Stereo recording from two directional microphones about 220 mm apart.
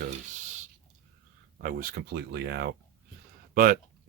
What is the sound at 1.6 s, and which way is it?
Speech, 40° right (ahead or behind).